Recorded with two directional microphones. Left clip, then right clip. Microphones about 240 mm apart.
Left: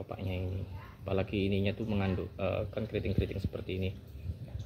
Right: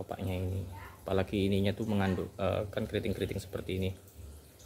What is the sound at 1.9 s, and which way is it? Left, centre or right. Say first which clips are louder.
Speech: right 2 dB; centre.